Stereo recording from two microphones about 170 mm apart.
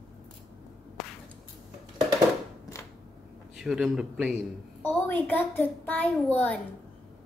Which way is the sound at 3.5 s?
5° right (ahead or behind).